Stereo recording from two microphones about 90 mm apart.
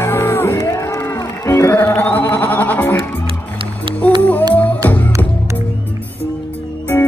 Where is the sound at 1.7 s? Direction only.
20° left (ahead or behind).